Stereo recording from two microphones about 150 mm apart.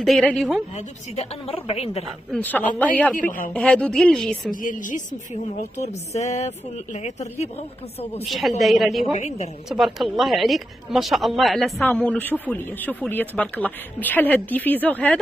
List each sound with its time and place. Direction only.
0.0 s speech: centre (ahead or behind)
0.7 s a woman's voice: 40° left (ahead or behind)
2.3 s speech: 10° left (ahead or behind)
3.2 s speech: 65° left (ahead or behind)
3.5 s speech: 5° left (ahead or behind)
4.5 s a woman's voice: 60° left (ahead or behind)
8.3 s speech: centre (ahead or behind)
9.1 s a woman's voice: 50° left (ahead or behind)
9.7 s speech: centre (ahead or behind)
11.8 s speech: 10° left (ahead or behind)